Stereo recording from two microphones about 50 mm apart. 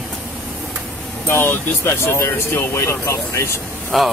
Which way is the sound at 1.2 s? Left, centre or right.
Left.